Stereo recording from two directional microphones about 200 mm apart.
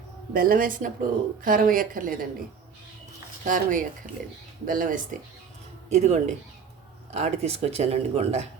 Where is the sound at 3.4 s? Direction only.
40° right (ahead or behind).